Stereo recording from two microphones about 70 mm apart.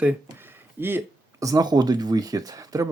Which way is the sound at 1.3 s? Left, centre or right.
Right.